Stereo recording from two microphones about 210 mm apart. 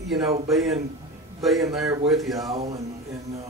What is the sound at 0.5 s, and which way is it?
A man's voice, centre (ahead or behind).